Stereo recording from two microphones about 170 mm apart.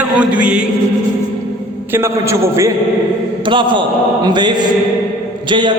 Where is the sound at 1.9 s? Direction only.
15° right (ahead or behind).